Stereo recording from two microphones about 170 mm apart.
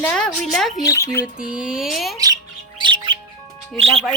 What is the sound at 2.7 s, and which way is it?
Bird, 30° right (ahead or behind).